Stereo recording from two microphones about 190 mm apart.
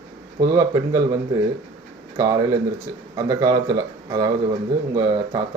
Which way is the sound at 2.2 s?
20° right (ahead or behind).